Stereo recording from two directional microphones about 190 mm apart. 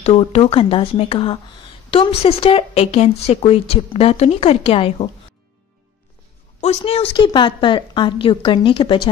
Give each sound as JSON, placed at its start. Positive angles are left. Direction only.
{"t": 0.0, "sound": "speech", "side_deg": 30}
{"t": 6.6, "sound": "a woman's voice", "side_deg": 30}